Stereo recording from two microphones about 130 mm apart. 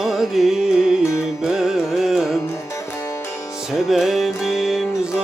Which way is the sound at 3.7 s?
Centre (ahead or behind).